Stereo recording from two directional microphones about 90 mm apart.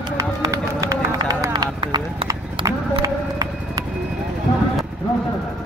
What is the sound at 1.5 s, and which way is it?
Clip-clop, 55° right (ahead or behind).